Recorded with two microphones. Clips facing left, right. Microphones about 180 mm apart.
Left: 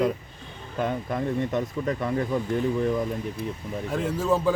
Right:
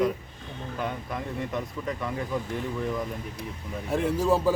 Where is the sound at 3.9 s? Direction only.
10° right (ahead or behind).